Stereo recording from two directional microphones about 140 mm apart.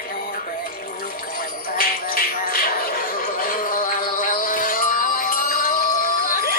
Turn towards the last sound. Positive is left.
turn(degrees=90)